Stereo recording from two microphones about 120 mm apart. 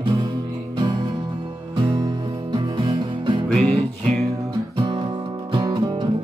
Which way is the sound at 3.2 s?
45° right (ahead or behind).